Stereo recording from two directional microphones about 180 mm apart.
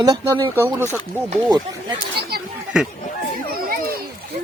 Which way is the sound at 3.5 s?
55° right (ahead or behind).